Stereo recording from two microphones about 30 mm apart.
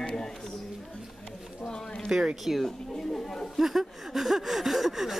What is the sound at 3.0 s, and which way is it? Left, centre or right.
Speech, centre.